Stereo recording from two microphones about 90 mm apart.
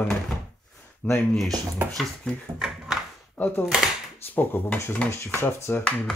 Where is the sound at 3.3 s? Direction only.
20° left (ahead or behind).